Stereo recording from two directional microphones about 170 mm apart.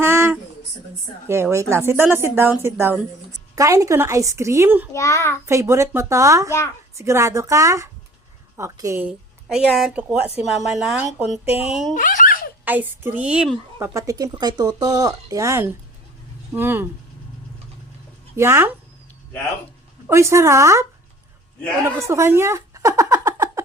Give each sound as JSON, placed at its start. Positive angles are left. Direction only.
{"t": 0.0, "sound": "a sound", "side_deg": -15}
{"t": 1.3, "sound": "a woman's voice", "side_deg": -15}
{"t": 4.9, "sound": "a child's voice", "side_deg": 15}
{"t": 5.5, "sound": "a woman's voice", "side_deg": -15}
{"t": 11.4, "sound": "speech", "side_deg": 35}
{"t": 11.7, "sound": "a woman's voice", "side_deg": 0}
{"t": 11.9, "sound": "giggle", "side_deg": 55}
{"t": 12.6, "sound": "a woman's voice", "side_deg": -10}
{"t": 13.7, "sound": "a woman's voice", "side_deg": -20}
{"t": 18.3, "sound": "a woman's voice", "side_deg": -15}
{"t": 20.1, "sound": "a woman's voice", "side_deg": -15}
{"t": 21.8, "sound": "speech", "side_deg": -15}